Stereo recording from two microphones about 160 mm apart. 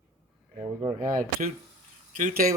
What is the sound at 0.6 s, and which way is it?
Speech, 50° right (ahead or behind).